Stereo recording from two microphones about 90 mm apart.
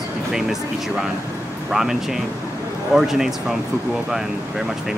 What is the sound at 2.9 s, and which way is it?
Speech, 5° right (ahead or behind).